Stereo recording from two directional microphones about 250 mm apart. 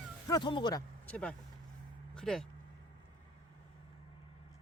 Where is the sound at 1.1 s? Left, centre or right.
Centre.